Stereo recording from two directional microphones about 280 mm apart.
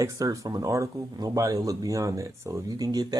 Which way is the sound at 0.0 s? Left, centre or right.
Centre.